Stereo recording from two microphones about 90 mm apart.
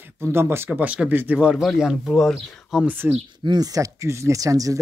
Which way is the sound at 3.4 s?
45° right (ahead or behind).